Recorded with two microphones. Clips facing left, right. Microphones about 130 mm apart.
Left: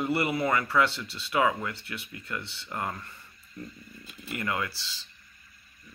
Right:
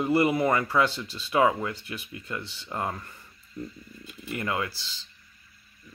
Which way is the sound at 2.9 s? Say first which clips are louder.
Right 2 dB; 10° right (ahead or behind).